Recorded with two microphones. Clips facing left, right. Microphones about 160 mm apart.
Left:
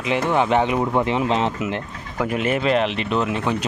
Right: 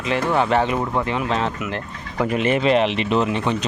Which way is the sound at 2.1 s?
Centre (ahead or behind).